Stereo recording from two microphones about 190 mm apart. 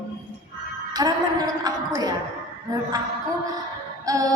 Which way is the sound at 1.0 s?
20° right (ahead or behind).